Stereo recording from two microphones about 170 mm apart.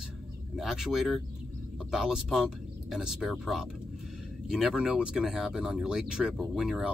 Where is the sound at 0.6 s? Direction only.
Centre (ahead or behind).